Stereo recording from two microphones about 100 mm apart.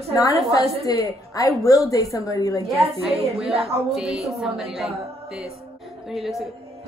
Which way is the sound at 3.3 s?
75° right (ahead or behind).